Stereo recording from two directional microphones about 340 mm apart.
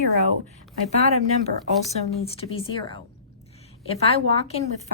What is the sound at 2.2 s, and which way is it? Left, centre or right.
Speech, centre.